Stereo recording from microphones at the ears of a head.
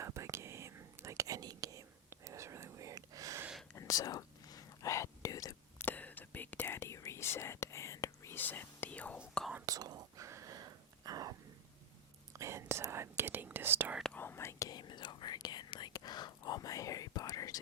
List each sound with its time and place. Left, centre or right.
0.0 s whispering: right
3.8 s whispering: left
9.6 s whispering: right
12.4 s whispering: right
14.2 s whispering: left